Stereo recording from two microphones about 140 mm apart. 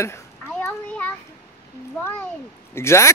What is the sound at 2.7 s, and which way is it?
Speech, 20° left (ahead or behind).